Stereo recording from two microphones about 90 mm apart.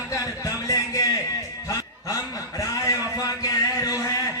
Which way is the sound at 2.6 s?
40° left (ahead or behind).